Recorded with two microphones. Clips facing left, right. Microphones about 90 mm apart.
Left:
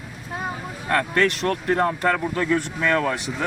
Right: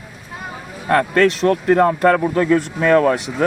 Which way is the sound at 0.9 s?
30° right (ahead or behind).